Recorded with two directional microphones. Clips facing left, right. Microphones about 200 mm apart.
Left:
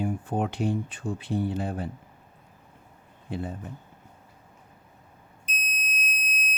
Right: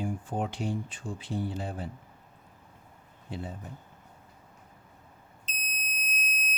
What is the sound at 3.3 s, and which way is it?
Speech, 55° left (ahead or behind).